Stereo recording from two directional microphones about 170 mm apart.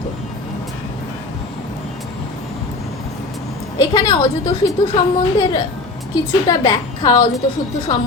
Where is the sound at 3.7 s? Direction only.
25° left (ahead or behind).